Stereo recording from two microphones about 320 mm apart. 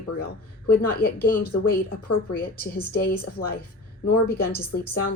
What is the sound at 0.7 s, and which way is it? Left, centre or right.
Speech, left.